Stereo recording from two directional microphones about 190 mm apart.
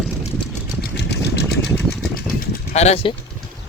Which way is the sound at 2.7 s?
35° left (ahead or behind).